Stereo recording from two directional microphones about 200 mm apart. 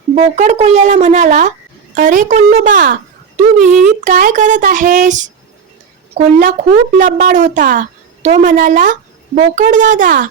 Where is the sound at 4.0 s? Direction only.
40° right (ahead or behind).